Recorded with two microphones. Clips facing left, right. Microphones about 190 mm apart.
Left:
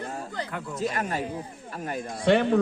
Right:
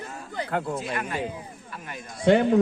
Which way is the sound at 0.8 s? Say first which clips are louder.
Left 3 dB; 40° left (ahead or behind).